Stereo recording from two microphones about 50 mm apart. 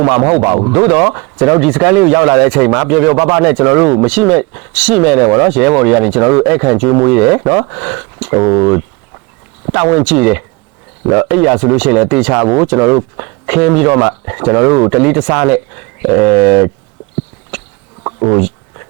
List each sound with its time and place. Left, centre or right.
0.2 s speech: centre
12.8 s speech: right
13.1 s speech: right
17.5 s a sound: centre